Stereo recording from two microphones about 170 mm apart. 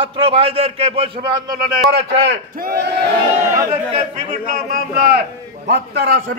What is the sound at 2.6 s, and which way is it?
Speech, 70° right (ahead or behind).